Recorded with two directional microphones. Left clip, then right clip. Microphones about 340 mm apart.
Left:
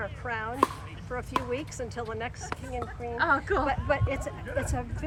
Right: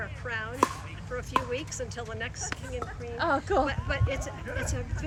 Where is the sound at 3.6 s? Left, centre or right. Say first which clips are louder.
Left 4 dB; centre.